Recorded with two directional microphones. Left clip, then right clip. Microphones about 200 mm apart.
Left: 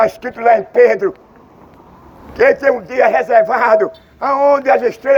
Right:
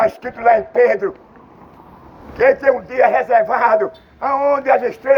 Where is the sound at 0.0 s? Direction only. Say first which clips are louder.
Left 2 dB; 55° left (ahead or behind).